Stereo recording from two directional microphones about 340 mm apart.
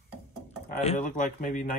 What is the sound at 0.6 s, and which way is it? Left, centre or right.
Speech, left.